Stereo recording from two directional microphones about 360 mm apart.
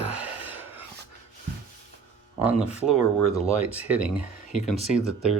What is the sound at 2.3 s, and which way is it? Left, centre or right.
Speech, centre.